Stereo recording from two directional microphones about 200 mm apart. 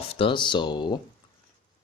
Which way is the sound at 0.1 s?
25° left (ahead or behind).